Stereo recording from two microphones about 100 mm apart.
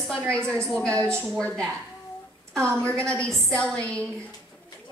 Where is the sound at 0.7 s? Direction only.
10° left (ahead or behind).